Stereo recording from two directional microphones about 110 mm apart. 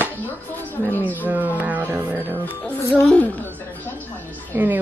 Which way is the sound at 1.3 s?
15° right (ahead or behind).